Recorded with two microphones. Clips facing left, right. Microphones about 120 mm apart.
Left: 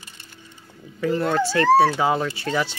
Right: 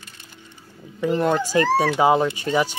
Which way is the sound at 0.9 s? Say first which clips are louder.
Right 1 dB; 20° right (ahead or behind).